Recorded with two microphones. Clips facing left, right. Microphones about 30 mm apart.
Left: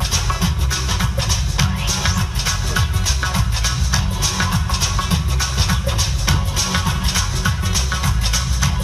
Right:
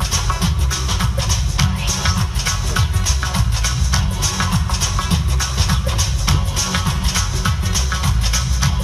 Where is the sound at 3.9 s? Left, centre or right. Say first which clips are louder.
Even; centre.